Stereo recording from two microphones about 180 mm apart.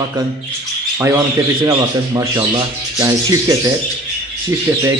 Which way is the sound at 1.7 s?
20° right (ahead or behind).